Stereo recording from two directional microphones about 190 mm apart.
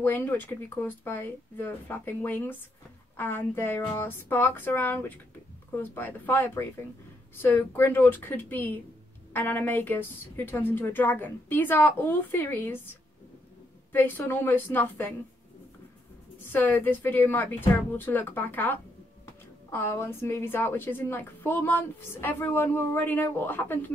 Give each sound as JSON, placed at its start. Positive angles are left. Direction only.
{"t": 0.0, "sound": "a woman's voice", "side_deg": 10}
{"t": 13.9, "sound": "a woman's voice", "side_deg": 10}
{"t": 16.5, "sound": "a woman's voice", "side_deg": 10}